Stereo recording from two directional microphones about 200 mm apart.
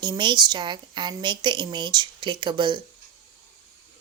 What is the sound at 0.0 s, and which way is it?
A woman's voice, 20° right (ahead or behind).